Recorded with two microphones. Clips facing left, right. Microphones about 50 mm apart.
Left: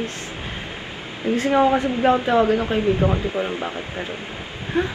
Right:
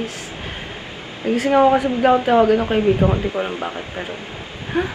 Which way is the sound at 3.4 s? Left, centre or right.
Right.